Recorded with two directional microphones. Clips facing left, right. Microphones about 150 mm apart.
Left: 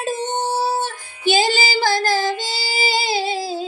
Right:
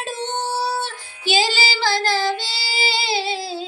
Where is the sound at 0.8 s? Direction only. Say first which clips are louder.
Left 3 dB; 50° left (ahead or behind).